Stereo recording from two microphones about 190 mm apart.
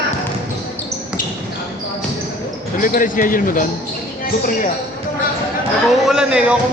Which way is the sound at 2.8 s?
45° left (ahead or behind).